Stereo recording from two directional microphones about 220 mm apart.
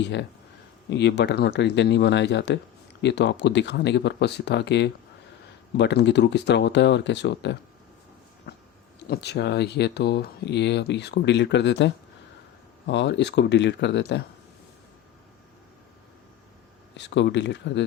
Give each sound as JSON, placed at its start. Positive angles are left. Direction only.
{"t": 0.0, "sound": "speech", "side_deg": 55}
{"t": 8.5, "sound": "a sound", "side_deg": 50}
{"t": 9.0, "sound": "speech", "side_deg": 50}
{"t": 12.9, "sound": "speech", "side_deg": 50}
{"t": 17.0, "sound": "speech", "side_deg": 50}